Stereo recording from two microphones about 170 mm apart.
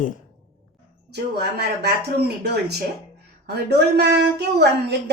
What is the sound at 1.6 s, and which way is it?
Speech, 70° right (ahead or behind).